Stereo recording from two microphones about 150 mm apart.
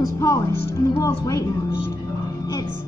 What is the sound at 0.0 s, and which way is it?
Music, 20° left (ahead or behind).